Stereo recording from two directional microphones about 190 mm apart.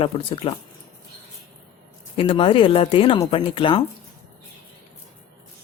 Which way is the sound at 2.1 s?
30° left (ahead or behind).